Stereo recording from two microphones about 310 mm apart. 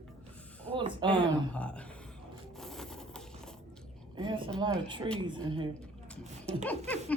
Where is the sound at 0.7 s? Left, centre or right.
Centre.